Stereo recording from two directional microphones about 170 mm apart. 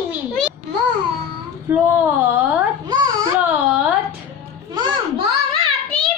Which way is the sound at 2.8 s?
25° right (ahead or behind).